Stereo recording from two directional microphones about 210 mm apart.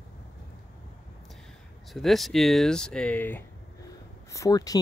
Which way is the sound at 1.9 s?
Centre (ahead or behind).